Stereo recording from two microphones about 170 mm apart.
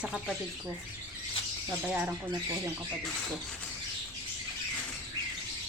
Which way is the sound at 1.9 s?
5° right (ahead or behind).